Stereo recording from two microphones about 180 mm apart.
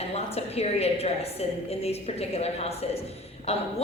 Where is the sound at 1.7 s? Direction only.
35° left (ahead or behind).